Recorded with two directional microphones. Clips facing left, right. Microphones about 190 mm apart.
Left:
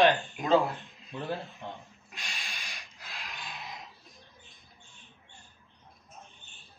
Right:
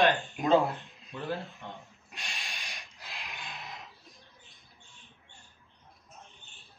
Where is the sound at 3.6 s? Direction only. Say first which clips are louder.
Left 1 dB; 20° left (ahead or behind).